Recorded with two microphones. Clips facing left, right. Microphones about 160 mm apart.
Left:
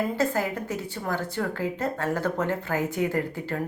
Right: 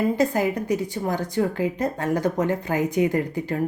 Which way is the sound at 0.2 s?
15° right (ahead or behind).